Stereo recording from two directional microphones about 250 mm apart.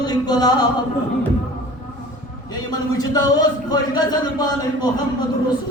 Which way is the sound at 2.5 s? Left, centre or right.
Centre.